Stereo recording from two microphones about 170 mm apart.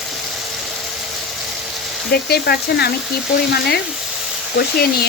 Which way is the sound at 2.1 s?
70° left (ahead or behind).